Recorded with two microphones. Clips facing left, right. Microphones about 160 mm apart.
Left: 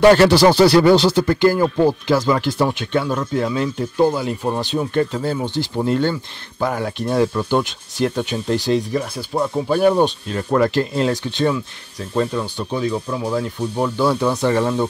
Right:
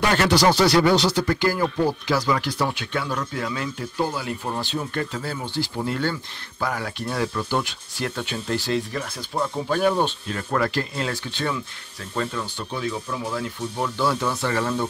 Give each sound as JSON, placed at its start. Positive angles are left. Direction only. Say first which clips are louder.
{"t": 0.0, "sound": "speech", "louder": "left 8 dB", "side_deg": 35}
{"t": 4.2, "sound": "speech", "louder": "left 7 dB", "side_deg": 20}